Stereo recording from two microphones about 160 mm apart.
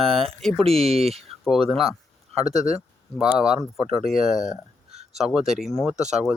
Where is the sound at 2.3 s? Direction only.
40° right (ahead or behind).